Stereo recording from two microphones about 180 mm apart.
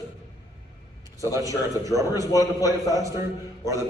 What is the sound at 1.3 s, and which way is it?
Speech, 20° right (ahead or behind).